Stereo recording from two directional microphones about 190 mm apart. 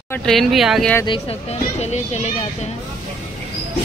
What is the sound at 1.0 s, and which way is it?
A child's voice, 30° left (ahead or behind).